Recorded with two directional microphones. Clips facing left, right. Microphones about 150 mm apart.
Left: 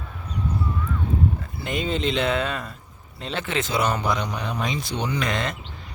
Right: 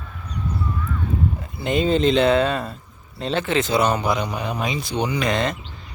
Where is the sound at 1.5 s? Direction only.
25° right (ahead or behind).